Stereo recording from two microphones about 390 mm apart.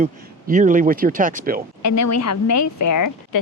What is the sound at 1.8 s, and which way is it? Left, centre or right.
A woman's voice, left.